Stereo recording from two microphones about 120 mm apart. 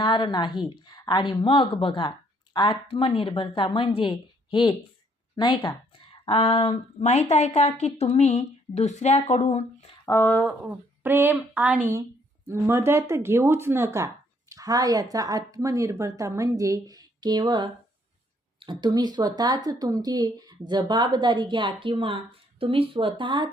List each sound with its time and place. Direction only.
0.0 s speech: 40° left (ahead or behind); by 9.9 s 70° left (ahead or behind)
10.1 s speech: 20° left (ahead or behind)
10.6 s a woman's voice: 15° right (ahead or behind); by 23.5 s 40° right (ahead or behind)